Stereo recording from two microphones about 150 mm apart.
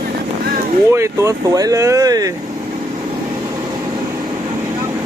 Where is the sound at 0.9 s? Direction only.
20° right (ahead or behind).